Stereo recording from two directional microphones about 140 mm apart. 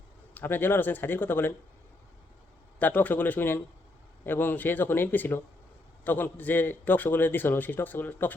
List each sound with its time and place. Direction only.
0.3 s a man's voice: 15° left (ahead or behind)
2.7 s a man's voice: 10° left (ahead or behind)